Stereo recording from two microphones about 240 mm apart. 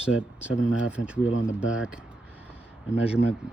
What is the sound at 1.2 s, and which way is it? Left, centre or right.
Speech, left.